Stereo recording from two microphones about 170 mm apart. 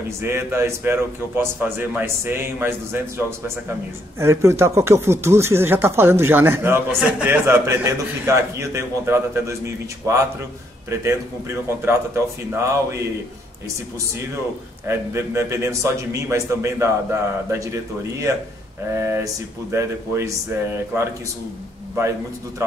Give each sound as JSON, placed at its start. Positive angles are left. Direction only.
{"t": 0.2, "sound": "speech", "side_deg": -15}
{"t": 14.9, "sound": "speech", "side_deg": -15}
{"t": 18.9, "sound": "speech", "side_deg": -15}